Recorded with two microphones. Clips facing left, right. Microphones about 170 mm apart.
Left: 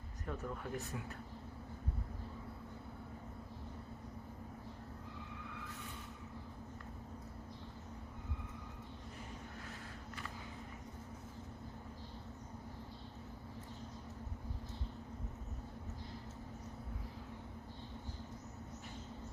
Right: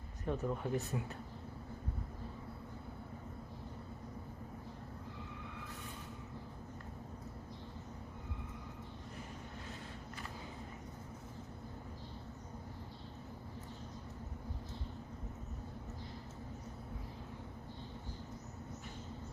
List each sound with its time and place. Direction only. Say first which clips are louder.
0.3 s speech: right 6 dB; 20° right (ahead or behind)